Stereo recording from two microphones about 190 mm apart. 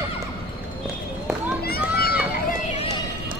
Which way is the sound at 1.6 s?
55° left (ahead or behind).